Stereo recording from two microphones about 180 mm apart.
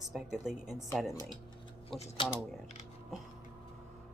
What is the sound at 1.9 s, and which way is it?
Speech, 35° left (ahead or behind).